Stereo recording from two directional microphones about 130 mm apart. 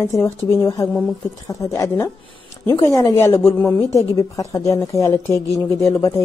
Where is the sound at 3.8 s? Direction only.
25° left (ahead or behind).